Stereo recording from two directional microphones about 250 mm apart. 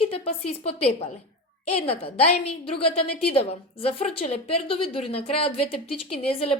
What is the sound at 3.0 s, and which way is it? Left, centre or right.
Speech, left.